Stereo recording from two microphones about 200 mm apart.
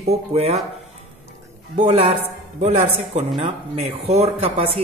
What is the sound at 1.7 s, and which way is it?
Speech, 35° right (ahead or behind).